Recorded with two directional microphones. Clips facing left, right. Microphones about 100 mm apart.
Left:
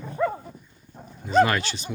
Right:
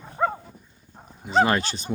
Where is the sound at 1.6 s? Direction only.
40° right (ahead or behind).